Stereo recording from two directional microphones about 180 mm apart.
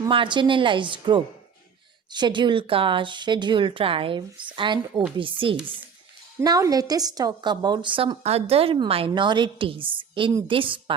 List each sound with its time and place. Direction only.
0.1 s a woman's voice: 25° right (ahead or behind)
6.4 s a woman's voice: 20° right (ahead or behind)